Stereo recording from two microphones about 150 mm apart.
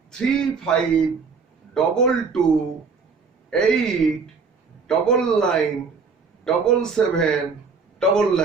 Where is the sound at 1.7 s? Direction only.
5° left (ahead or behind).